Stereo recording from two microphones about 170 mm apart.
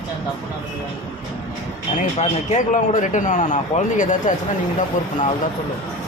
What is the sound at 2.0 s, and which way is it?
Speech, 45° left (ahead or behind).